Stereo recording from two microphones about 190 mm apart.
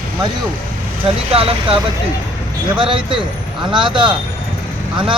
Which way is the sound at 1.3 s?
30° right (ahead or behind).